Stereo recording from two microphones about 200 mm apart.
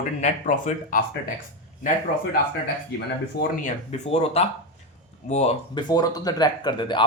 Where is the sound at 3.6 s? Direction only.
35° left (ahead or behind).